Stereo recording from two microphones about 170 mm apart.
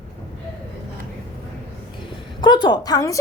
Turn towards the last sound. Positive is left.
turn(degrees=20)  # may be behind; listen again after turning